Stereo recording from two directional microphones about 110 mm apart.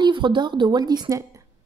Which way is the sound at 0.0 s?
45° right (ahead or behind).